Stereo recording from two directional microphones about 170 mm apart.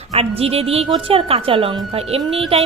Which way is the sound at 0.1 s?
35° right (ahead or behind).